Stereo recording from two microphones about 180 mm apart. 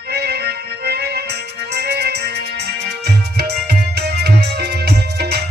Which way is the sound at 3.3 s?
65° right (ahead or behind).